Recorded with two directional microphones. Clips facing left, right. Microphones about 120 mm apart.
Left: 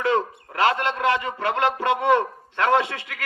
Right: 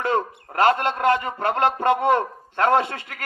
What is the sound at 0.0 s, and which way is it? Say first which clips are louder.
A man's voice: left 1 dB; 45° right (ahead or behind).